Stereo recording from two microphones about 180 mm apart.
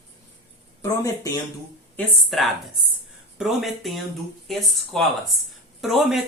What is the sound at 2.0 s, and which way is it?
Speech, centre (ahead or behind).